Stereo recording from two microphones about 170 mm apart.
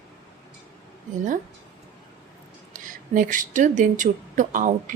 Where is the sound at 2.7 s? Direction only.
50° right (ahead or behind).